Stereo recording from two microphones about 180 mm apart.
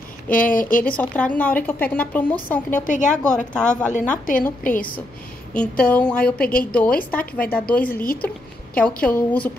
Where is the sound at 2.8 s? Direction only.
45° left (ahead or behind).